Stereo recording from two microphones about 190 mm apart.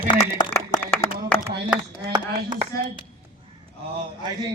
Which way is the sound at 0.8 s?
10° left (ahead or behind).